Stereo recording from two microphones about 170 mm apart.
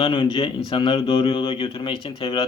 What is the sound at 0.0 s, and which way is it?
Speech, 30° left (ahead or behind).